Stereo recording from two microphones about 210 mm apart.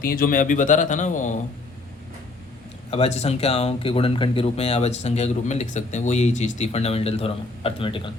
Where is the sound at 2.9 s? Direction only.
30° left (ahead or behind).